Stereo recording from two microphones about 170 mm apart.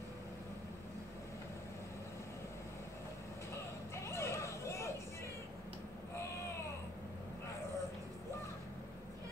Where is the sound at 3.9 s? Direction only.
15° left (ahead or behind).